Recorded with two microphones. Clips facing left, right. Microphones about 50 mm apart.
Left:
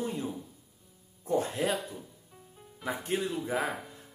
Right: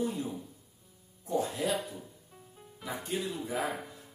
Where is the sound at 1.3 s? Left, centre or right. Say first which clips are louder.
Left 2 dB; left.